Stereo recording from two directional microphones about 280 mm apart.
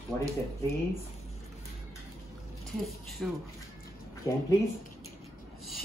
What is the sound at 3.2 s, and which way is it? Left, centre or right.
Speech, centre.